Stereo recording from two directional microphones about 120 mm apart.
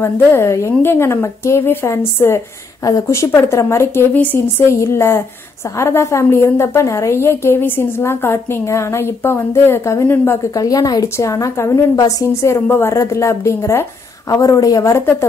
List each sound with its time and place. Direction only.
0.0 s a woman's voice: 20° left (ahead or behind)
10.5 s a woman's voice: 30° left (ahead or behind)